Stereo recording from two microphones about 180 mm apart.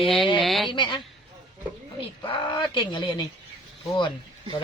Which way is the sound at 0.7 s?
25° left (ahead or behind).